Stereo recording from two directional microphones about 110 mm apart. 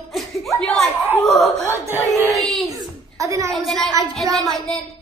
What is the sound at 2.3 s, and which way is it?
Speech, centre (ahead or behind).